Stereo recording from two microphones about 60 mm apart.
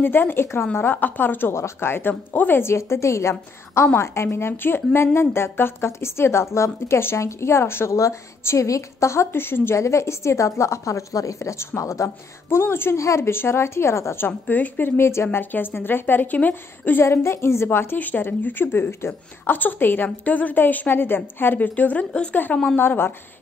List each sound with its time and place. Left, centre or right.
0.0 s speech: left
1.5 s speech: left
2.6 s a woman's voice: left
7.9 s a woman's voice: left
9.8 s a woman's voice: left
12.9 s a woman's voice: left
17.0 s a woman's voice: left